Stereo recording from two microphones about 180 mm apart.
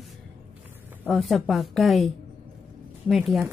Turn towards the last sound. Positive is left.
turn(degrees=0)  # may be behind; listen again after turning